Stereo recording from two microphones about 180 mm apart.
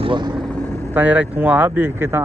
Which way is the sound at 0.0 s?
25° right (ahead or behind).